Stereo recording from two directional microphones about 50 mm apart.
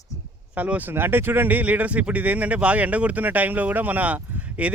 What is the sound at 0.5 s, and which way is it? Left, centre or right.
Speech, right.